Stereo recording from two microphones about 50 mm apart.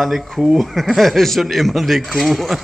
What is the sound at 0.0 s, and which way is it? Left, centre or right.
Speech, centre.